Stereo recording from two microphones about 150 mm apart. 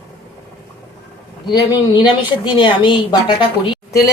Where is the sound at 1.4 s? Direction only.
30° left (ahead or behind).